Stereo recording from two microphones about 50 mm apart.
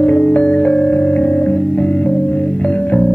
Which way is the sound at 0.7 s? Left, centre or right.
Centre.